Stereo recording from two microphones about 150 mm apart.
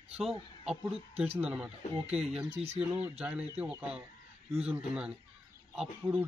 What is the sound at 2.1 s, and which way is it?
Speech, 45° right (ahead or behind).